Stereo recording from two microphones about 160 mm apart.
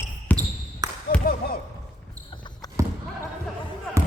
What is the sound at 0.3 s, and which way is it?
Basketball bounce, 10° left (ahead or behind).